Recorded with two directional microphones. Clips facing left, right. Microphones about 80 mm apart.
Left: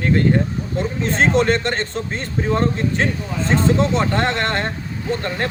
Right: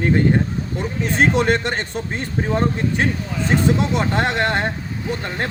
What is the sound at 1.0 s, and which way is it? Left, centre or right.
A man's voice, centre.